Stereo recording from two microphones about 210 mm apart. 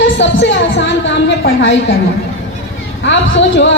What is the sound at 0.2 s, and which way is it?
Speech, 60° left (ahead or behind).